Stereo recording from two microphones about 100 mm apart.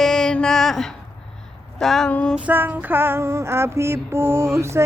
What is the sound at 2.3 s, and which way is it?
Female singing, 15° right (ahead or behind).